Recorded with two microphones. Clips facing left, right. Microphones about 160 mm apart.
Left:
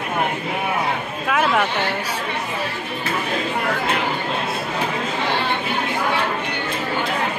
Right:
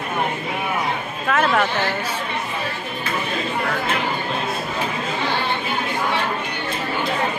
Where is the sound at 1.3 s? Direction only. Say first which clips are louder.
Even; 10° left (ahead or behind).